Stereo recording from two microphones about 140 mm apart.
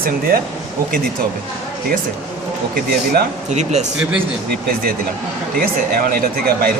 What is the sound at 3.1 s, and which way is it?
Speech, 55° right (ahead or behind).